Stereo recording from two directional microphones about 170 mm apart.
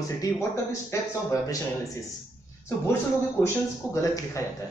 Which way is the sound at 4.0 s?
20° left (ahead or behind).